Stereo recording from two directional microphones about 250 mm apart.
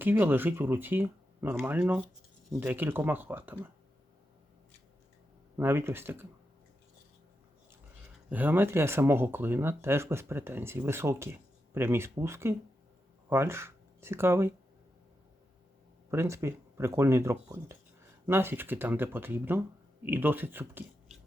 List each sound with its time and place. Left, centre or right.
0.0 s speech: centre
5.5 s speech: centre
8.3 s speech: centre
16.1 s speech: centre